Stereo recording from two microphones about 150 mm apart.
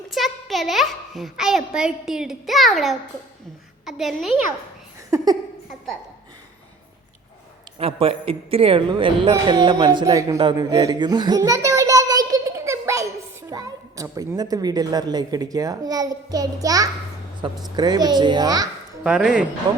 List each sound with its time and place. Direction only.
0.1 s a child's voice: centre (ahead or behind)
5.1 s a sound: 25° right (ahead or behind)
7.8 s a woman's voice: 40° right (ahead or behind)
19.0 s a woman's voice: 5° right (ahead or behind)